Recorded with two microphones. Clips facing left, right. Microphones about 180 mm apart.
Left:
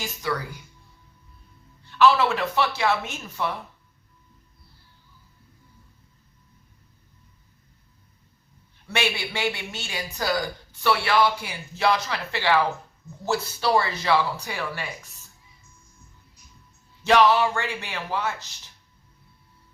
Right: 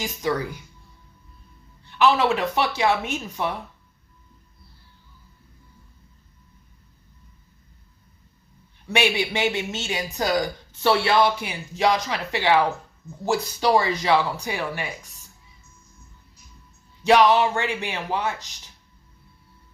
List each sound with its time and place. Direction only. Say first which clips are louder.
0.0 s speech: right 4 dB; 20° right (ahead or behind)
2.0 s speech: even; 15° right (ahead or behind)
8.9 s speech: right 5 dB; 15° right (ahead or behind)
17.0 s speech: right 2 dB; 15° right (ahead or behind)